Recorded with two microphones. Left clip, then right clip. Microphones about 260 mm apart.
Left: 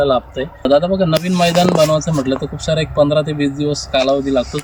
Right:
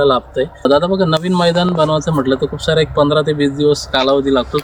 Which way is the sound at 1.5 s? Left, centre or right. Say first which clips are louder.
Left 2 dB; left.